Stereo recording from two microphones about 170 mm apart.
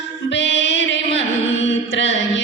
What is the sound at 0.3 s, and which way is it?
Music, 90° left.